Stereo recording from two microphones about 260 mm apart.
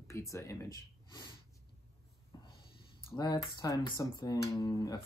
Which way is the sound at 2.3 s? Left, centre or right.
Centre.